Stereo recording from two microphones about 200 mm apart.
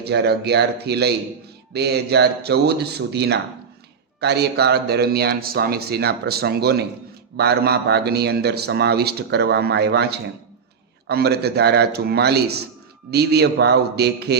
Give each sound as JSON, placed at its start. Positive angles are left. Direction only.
{"t": 0.0, "sound": "a man's voice", "side_deg": -55}